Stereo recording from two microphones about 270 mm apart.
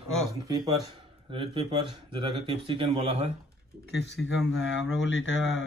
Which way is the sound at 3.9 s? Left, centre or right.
Left.